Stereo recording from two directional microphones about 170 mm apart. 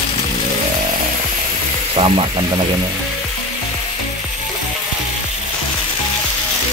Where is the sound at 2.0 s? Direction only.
25° right (ahead or behind).